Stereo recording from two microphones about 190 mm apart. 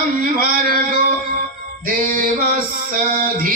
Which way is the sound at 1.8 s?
45° right (ahead or behind).